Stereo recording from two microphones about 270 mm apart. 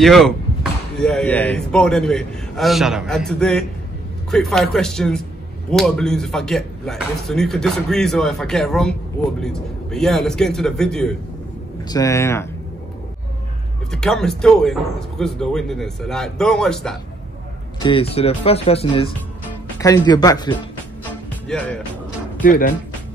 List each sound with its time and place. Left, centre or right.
0.0 s speech: centre
13.9 s speech: centre
17.8 s speech: centre
21.0 s music: centre
22.4 s speech: left